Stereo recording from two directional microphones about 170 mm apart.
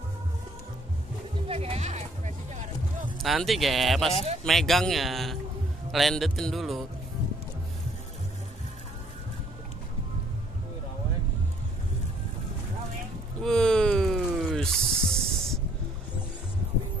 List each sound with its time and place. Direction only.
1.5 s sheep: 35° right (ahead or behind)
3.2 s speech: centre (ahead or behind)
13.4 s a sound: 5° left (ahead or behind)